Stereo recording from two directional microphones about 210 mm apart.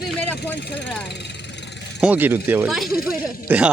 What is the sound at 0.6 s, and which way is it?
Speech, 55° left (ahead or behind).